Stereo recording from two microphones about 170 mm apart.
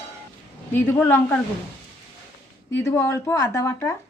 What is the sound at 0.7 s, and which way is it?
Speech, 10° left (ahead or behind).